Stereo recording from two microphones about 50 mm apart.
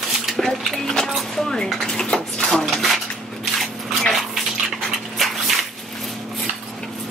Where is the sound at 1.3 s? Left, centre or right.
Centre.